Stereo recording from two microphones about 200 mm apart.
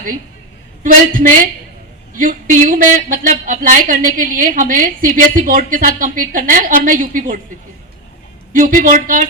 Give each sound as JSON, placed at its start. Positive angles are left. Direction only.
{"t": 0.8, "sound": "a woman's voice", "side_deg": -45}
{"t": 8.5, "sound": "a woman's voice", "side_deg": -45}